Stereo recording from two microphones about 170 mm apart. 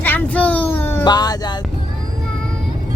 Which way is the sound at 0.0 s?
10° left (ahead or behind).